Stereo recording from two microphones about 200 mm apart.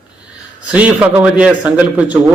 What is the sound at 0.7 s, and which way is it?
A man's voice, 5° right (ahead or behind).